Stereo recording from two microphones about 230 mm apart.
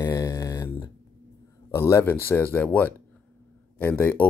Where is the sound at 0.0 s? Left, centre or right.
Centre.